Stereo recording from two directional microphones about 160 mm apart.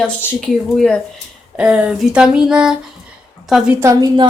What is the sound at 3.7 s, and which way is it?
Speech, 20° right (ahead or behind).